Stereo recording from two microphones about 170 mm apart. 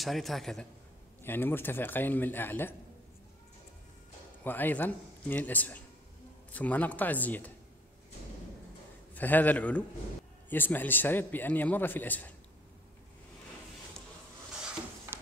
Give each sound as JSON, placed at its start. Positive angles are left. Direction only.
{"t": 0.0, "sound": "a man's voice", "side_deg": 0}
{"t": 1.2, "sound": "a man's voice", "side_deg": 10}
{"t": 4.5, "sound": "a man's voice", "side_deg": 10}
{"t": 9.1, "sound": "a man's voice", "side_deg": 10}